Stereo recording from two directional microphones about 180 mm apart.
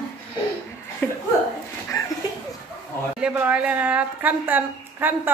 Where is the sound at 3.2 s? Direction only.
10° right (ahead or behind).